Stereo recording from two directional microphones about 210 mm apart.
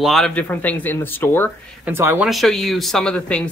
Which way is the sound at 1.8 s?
10° right (ahead or behind).